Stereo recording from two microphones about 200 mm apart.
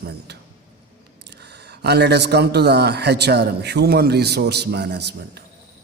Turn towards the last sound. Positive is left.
turn(degrees=-55)  # may be behind; listen again after turning